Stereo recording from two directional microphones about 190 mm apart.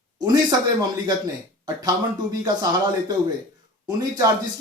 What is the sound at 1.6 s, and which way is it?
Speech, 20° right (ahead or behind).